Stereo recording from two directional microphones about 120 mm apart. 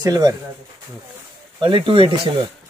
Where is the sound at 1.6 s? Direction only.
40° right (ahead or behind).